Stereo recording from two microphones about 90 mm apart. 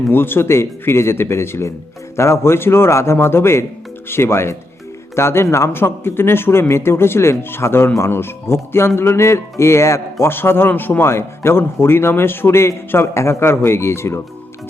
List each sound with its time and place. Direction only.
0.1 s a man's voice: 25° left (ahead or behind)